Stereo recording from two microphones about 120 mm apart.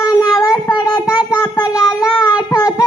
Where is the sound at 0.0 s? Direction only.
30° left (ahead or behind).